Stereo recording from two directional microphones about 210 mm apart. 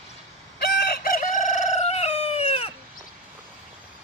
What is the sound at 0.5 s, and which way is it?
Chicken, 50° left (ahead or behind).